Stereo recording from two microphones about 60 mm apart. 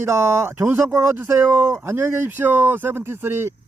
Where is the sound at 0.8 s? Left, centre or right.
Right.